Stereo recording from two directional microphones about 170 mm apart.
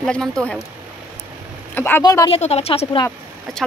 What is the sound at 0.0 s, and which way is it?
Speech, 5° left (ahead or behind).